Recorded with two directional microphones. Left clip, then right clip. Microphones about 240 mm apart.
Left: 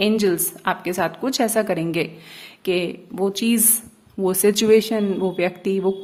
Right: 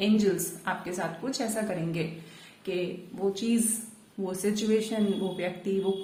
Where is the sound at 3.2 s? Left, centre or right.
Left.